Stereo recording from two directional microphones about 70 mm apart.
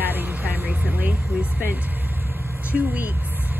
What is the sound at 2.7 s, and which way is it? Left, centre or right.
Speech, centre.